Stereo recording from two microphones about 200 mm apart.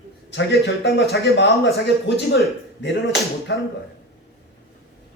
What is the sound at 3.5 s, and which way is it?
Speech, 60° left (ahead or behind).